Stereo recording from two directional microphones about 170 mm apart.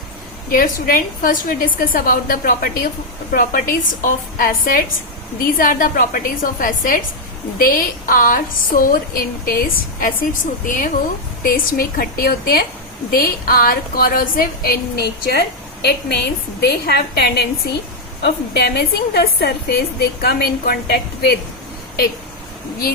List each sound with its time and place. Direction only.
0.5 s a woman's voice: 55° left (ahead or behind)